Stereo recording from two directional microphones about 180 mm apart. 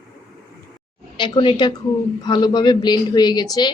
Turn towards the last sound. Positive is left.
turn(degrees=25)  # may be behind; listen again after turning